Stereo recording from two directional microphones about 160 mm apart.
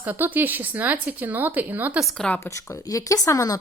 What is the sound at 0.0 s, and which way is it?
A woman's voice, 10° right (ahead or behind).